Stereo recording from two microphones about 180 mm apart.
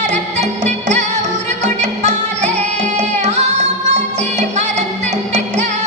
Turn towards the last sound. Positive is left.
turn(degrees=-40)  # may be behind; listen again after turning